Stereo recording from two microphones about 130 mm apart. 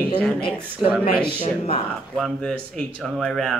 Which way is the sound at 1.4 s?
50° left (ahead or behind).